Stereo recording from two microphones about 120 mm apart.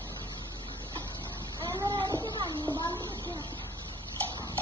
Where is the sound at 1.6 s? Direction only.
35° right (ahead or behind).